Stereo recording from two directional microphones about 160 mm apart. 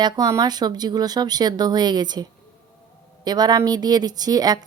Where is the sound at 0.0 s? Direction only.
25° right (ahead or behind).